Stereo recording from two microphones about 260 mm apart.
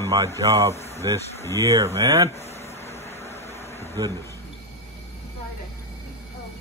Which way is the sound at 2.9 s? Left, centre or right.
Centre.